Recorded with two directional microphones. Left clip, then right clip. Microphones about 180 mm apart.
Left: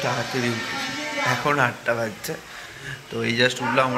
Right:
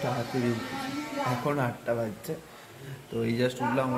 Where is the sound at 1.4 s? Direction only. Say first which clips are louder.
Left 8 dB; 10° right (ahead or behind).